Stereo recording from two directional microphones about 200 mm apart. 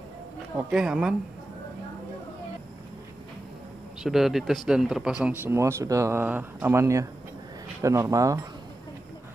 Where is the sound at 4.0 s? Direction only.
Centre (ahead or behind).